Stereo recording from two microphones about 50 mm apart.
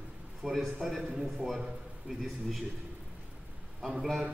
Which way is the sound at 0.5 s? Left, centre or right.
Centre.